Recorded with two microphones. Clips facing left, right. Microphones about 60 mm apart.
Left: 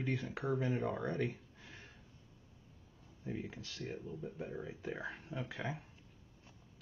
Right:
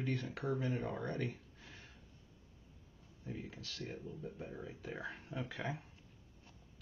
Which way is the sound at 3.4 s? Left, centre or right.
Centre.